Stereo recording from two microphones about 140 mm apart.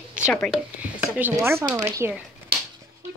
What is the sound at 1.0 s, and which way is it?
Speech, 10° right (ahead or behind).